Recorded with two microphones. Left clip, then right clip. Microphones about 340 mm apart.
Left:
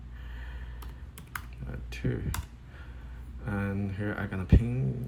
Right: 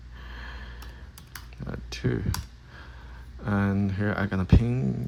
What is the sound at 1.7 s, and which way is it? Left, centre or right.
Speech, centre.